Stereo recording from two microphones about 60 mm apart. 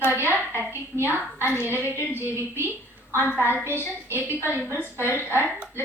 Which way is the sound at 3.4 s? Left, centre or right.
Left.